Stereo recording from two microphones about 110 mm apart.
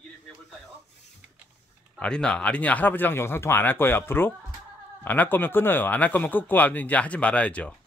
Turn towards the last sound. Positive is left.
turn(degrees=10)  # may be behind; listen again after turning